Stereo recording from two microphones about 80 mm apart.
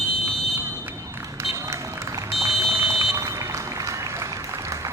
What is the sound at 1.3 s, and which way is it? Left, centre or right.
Run, right.